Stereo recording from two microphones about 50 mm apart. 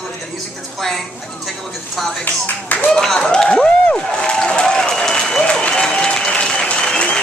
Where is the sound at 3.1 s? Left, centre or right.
Centre.